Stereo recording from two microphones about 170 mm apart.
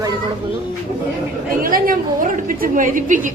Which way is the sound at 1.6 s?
55° right (ahead or behind).